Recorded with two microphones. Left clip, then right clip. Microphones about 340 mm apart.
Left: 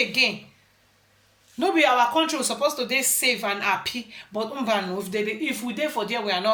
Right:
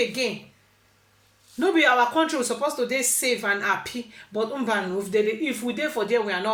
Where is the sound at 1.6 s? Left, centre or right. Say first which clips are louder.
Even; centre.